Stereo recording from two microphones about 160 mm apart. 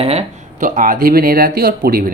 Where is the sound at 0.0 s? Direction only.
40° right (ahead or behind).